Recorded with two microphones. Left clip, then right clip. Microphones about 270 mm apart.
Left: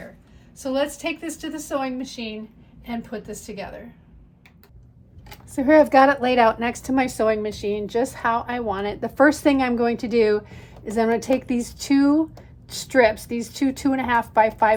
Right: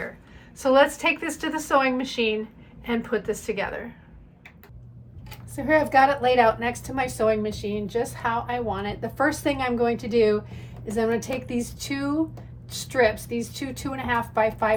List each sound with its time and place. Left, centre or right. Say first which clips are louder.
0.6 s a woman's voice: right 6 dB; centre
2.0 s a woman's voice: right 7 dB; centre
5.5 s a woman's voice: left 4 dB; left